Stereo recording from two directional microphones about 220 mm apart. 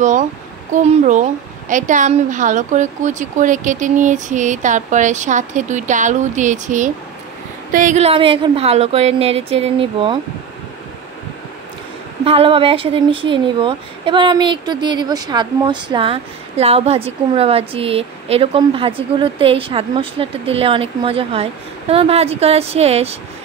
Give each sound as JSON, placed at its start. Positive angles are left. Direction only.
{"t": 0.8, "sound": "speech", "side_deg": -35}
{"t": 12.3, "sound": "speech", "side_deg": -25}